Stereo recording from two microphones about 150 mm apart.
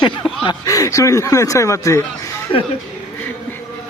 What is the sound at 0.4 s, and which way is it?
Speech, 25° left (ahead or behind).